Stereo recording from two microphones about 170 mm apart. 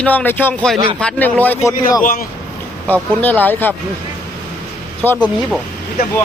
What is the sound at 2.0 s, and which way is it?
Speech, 55° left (ahead or behind).